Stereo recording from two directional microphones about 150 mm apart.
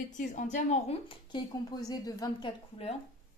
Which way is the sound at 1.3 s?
25° left (ahead or behind).